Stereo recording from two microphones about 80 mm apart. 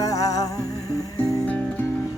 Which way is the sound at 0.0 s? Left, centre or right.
Left.